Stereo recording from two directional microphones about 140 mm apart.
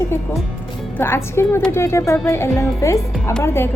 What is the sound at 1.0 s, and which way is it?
A woman's voice, 15° left (ahead or behind).